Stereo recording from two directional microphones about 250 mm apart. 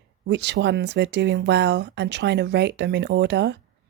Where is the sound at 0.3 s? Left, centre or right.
Right.